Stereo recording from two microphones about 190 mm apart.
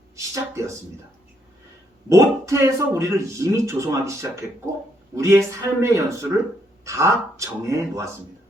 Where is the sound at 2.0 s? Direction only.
15° right (ahead or behind).